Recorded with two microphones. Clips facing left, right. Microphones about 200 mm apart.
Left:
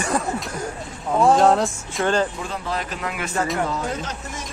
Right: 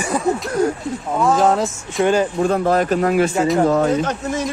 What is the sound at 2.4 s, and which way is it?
Speech, 50° right (ahead or behind).